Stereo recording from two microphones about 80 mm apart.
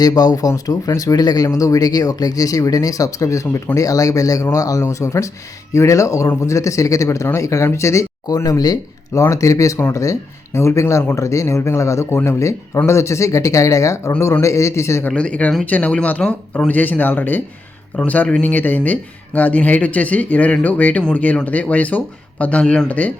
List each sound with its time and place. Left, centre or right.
0.0 s speech: left
8.4 s speech: left
9.2 s speech: left
15.0 s speech: centre
22.9 s speech: centre